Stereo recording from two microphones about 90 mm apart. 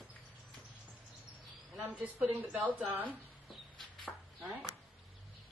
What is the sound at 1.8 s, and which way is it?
A woman's voice, 15° right (ahead or behind).